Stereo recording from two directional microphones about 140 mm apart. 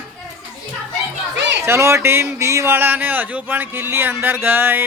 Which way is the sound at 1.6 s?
20° right (ahead or behind).